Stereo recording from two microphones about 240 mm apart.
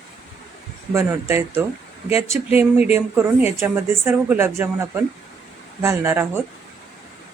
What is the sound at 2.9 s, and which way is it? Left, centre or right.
Speech, centre.